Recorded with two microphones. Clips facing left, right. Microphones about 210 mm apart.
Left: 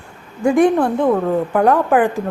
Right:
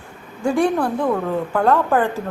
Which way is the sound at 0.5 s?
20° left (ahead or behind).